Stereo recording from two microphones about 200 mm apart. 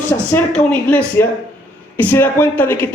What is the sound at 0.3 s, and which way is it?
A woman's voice, 5° left (ahead or behind).